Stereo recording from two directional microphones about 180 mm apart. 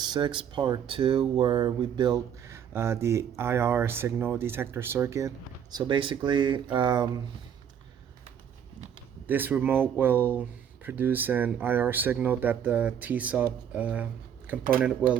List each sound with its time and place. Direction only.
0.0 s speech: 25° right (ahead or behind)
5.7 s speech: 30° right (ahead or behind)
9.2 s speech: 10° right (ahead or behind)